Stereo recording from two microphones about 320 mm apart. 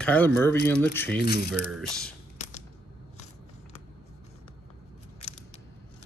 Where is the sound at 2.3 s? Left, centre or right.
Left.